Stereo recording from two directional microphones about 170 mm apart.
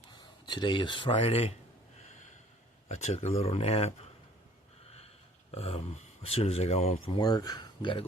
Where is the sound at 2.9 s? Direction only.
40° left (ahead or behind).